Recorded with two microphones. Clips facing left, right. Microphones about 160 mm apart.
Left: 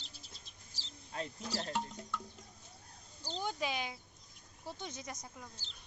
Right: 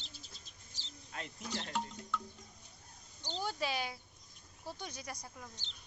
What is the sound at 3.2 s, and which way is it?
Speech, centre (ahead or behind).